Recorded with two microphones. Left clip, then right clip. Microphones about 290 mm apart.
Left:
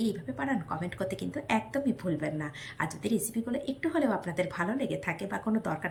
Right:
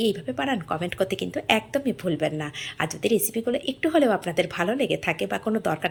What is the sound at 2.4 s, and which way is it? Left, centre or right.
A woman's voice, centre.